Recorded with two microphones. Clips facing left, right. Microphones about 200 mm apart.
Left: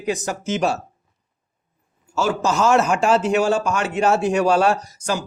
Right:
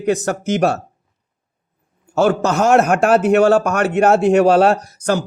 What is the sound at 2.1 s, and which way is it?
A man's voice, 60° right (ahead or behind).